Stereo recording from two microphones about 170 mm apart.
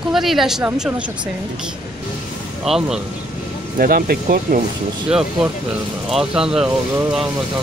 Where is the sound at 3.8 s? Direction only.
60° right (ahead or behind).